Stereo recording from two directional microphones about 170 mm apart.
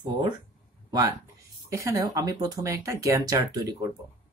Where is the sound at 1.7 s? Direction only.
20° right (ahead or behind).